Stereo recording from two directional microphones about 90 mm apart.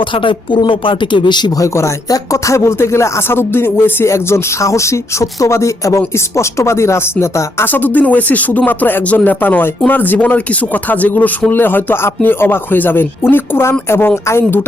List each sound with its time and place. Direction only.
0.1 s speech: 70° left (ahead or behind)
1.5 s speech: 35° left (ahead or behind)